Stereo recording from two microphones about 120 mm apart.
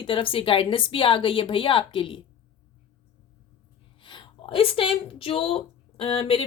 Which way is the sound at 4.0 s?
45° left (ahead or behind).